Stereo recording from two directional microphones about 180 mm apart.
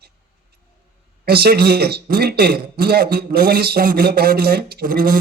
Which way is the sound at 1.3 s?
60° right (ahead or behind).